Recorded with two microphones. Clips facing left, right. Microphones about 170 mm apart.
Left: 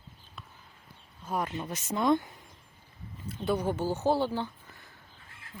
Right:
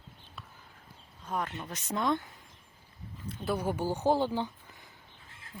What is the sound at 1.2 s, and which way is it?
Speech, 10° left (ahead or behind).